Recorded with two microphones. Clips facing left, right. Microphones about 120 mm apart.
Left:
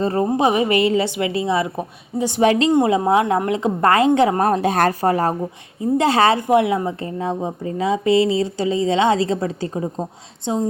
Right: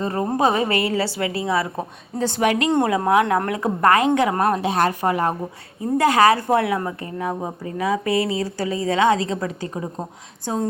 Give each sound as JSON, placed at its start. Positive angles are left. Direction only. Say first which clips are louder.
{"t": 0.0, "sound": "a woman's voice", "louder": "left 3 dB", "side_deg": 30}
{"t": 2.4, "sound": "a woman's voice", "louder": "left 4 dB", "side_deg": 30}